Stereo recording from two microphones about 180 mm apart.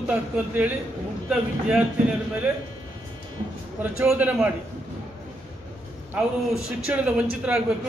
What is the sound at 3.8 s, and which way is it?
Speech, 10° right (ahead or behind).